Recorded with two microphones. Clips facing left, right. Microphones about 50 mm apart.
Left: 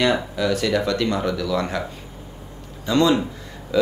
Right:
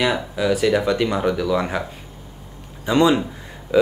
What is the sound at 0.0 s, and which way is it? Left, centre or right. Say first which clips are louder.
A man's voice: even; centre.